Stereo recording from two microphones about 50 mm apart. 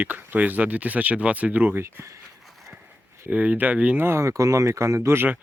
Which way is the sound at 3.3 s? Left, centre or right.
Right.